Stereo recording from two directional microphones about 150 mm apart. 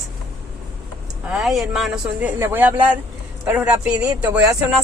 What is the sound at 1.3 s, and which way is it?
Speech, centre (ahead or behind).